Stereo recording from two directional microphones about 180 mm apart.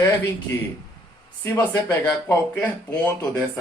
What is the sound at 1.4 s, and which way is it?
Speech, 20° left (ahead or behind).